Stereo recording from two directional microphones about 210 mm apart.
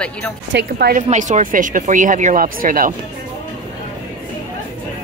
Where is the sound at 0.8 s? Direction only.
40° right (ahead or behind).